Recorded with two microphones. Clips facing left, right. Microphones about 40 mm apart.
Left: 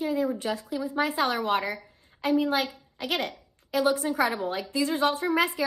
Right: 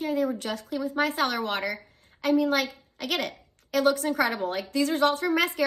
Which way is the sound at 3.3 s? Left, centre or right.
Right.